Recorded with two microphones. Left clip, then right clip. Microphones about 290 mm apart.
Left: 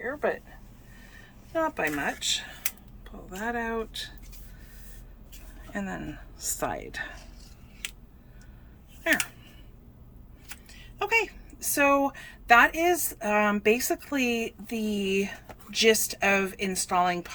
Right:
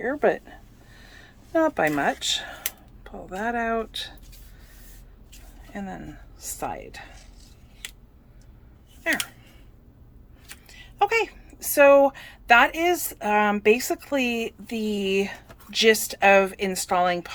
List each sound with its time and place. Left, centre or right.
0.0 s speech: right; by 4.1 s centre
5.7 s a woman's voice: centre
10.7 s a woman's voice: centre